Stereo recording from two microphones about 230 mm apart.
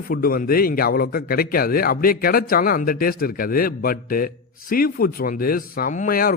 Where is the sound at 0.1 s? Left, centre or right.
Left.